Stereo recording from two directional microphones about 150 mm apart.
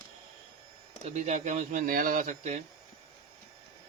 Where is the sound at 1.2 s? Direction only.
55° right (ahead or behind).